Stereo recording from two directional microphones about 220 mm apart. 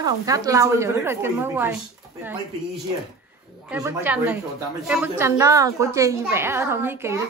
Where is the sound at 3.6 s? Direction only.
5° right (ahead or behind).